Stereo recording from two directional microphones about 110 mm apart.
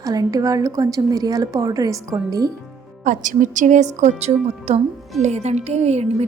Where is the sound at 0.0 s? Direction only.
35° right (ahead or behind).